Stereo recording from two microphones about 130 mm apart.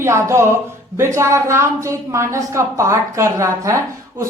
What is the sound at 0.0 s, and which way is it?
Speech, 20° right (ahead or behind).